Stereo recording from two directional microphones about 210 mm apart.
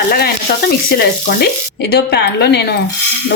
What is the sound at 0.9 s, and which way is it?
A woman's voice, 45° left (ahead or behind).